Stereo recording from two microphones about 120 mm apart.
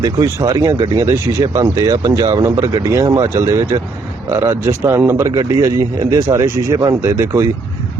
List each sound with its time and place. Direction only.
0.0 s speech: 30° right (ahead or behind)
5.2 s speech: 30° right (ahead or behind)